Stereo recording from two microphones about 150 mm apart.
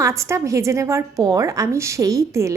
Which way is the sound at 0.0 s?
20° right (ahead or behind).